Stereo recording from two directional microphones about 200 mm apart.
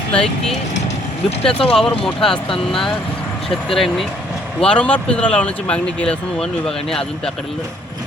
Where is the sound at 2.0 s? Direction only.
5° left (ahead or behind).